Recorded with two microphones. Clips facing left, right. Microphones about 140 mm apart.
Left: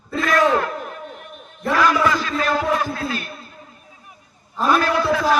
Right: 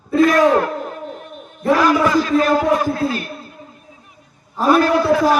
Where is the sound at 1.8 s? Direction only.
40° right (ahead or behind).